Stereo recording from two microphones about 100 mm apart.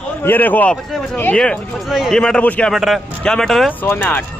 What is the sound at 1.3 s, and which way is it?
A man's voice, 5° left (ahead or behind).